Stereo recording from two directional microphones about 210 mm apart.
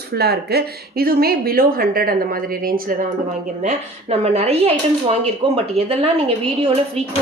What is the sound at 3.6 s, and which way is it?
A woman's voice, 30° right (ahead or behind).